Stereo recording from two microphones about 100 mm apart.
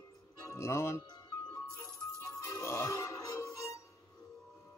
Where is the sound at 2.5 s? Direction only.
25° left (ahead or behind).